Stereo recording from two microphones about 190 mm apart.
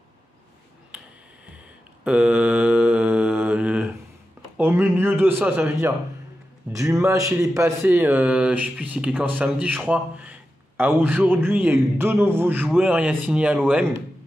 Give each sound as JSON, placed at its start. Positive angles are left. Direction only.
{"t": 2.0, "sound": "mantra", "side_deg": -5}
{"t": 4.6, "sound": "speech", "side_deg": -10}